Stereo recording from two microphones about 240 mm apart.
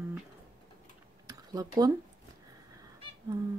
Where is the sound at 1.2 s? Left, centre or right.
Centre.